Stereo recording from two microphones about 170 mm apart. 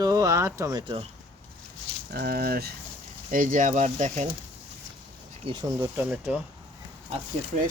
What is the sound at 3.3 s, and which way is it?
Speech, 50° right (ahead or behind).